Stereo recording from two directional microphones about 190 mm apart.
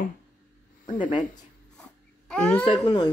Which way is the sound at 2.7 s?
25° left (ahead or behind).